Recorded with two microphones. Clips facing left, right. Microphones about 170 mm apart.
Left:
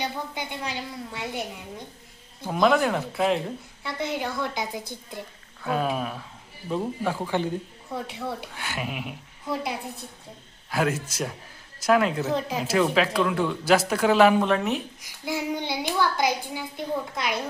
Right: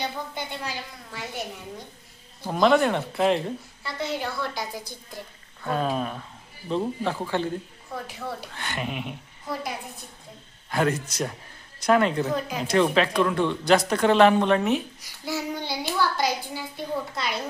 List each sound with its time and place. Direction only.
0.0 s a child's voice: 15° left (ahead or behind)
2.5 s speech: centre (ahead or behind)
4.1 s a woman's voice: 15° left (ahead or behind)
5.6 s a child's voice: 5° left (ahead or behind)
10.7 s speech: 5° left (ahead or behind)
15.2 s a child's voice: 15° left (ahead or behind)